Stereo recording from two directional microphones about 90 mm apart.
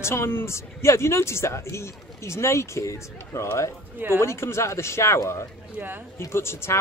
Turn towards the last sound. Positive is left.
turn(degrees=30)  # may be behind; listen again after turning